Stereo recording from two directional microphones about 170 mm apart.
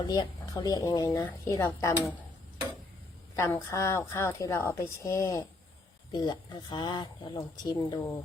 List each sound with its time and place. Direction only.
0.0 s a woman's voice: 25° left (ahead or behind)
3.3 s a woman's voice: 15° left (ahead or behind)
6.1 s speech: 25° left (ahead or behind)